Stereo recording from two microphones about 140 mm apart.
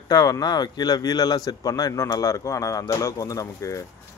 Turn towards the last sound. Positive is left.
turn(degrees=25)  # may be behind; listen again after turning